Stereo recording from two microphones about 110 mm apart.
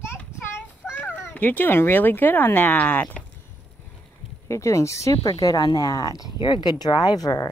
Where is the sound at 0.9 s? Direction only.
20° left (ahead or behind).